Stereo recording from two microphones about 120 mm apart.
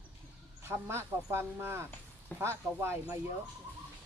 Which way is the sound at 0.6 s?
20° right (ahead or behind).